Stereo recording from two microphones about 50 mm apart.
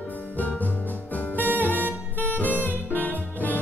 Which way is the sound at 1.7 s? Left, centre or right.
Right.